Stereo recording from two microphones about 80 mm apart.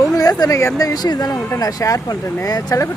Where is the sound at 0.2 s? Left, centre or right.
Left.